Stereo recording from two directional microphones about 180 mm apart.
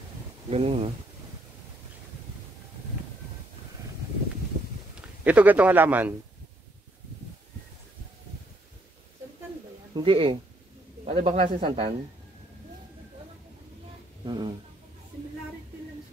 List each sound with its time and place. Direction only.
0.5 s speech: 35° right (ahead or behind)
5.2 s speech: 10° right (ahead or behind)
9.9 s speech: 30° right (ahead or behind)
14.2 s speech: 25° right (ahead or behind)